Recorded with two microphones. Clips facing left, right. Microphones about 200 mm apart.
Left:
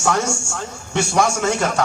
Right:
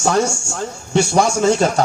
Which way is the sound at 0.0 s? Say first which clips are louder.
Right 3 dB; 35° right (ahead or behind).